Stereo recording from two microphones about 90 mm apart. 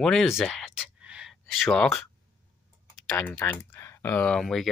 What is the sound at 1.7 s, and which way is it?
Speech, 5° left (ahead or behind).